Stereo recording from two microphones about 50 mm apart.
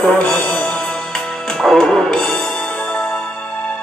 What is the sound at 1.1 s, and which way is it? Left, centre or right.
Music, centre.